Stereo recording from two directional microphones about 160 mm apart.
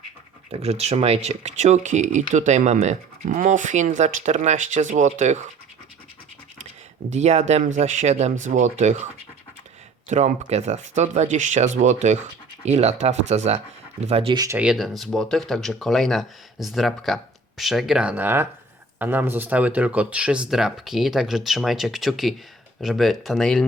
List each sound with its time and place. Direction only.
0.5 s speech: 40° right (ahead or behind)
7.1 s speech: 45° right (ahead or behind)
10.1 s speech: 50° right (ahead or behind)
14.3 s speech: 20° right (ahead or behind)
14.6 s speech: 5° right (ahead or behind)